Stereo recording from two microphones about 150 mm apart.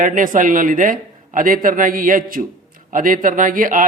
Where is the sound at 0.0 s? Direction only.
60° right (ahead or behind).